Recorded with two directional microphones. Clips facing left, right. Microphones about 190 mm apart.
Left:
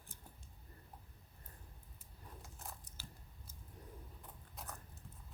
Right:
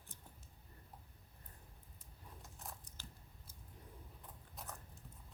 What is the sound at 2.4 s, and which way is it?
Biting, centre (ahead or behind).